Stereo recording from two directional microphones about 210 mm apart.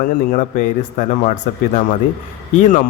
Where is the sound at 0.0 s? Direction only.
40° left (ahead or behind).